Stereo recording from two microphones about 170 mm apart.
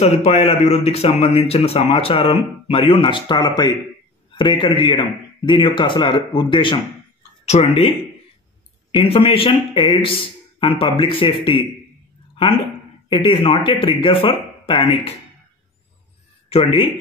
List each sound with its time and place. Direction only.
0.0 s a man's voice: 40° left (ahead or behind)
9.0 s a man's voice: 35° left (ahead or behind)
13.1 s a man's voice: 30° left (ahead or behind)
16.4 s speech: 35° left (ahead or behind)